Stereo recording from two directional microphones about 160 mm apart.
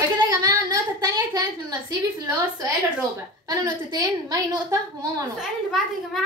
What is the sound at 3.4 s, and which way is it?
A woman's voice, 25° right (ahead or behind).